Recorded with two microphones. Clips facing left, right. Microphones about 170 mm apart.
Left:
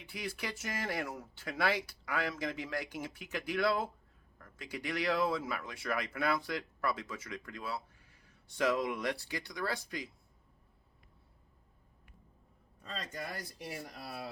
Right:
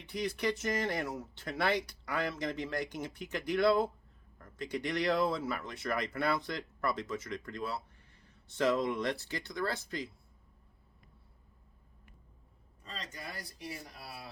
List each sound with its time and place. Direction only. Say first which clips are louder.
0.0 s speech: right 7 dB; 5° left (ahead or behind)
12.8 s speech: left 3 dB; 50° left (ahead or behind)